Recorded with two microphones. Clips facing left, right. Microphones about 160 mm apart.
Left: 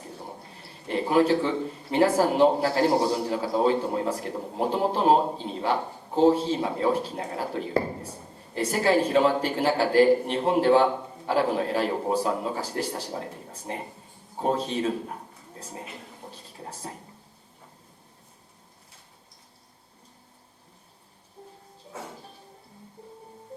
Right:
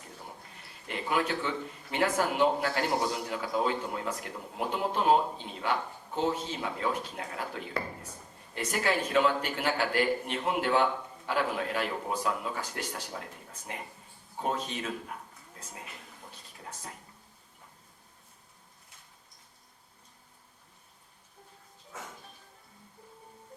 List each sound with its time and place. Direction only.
0.0 s a man's voice: 30° left (ahead or behind)
21.9 s music: 30° left (ahead or behind)
23.5 s music: 30° left (ahead or behind)